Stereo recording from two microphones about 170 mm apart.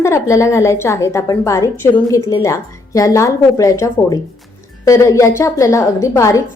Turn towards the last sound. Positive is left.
turn(degrees=20)  # may be behind; listen again after turning